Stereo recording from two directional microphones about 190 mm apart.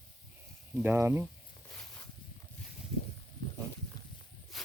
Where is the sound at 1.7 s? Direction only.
10° left (ahead or behind).